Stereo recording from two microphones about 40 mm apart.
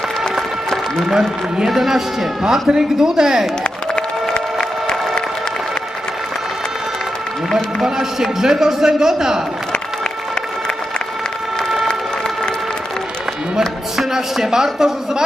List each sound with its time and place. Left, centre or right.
1.6 s a man's voice: centre
4.3 s music: centre
7.9 s a man's voice: centre
14.1 s a man's voice: centre